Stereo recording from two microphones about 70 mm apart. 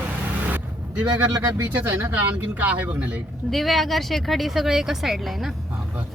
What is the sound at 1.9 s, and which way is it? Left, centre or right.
Speech, right.